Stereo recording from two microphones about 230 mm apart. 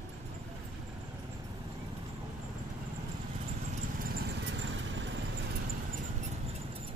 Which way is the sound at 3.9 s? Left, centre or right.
Right.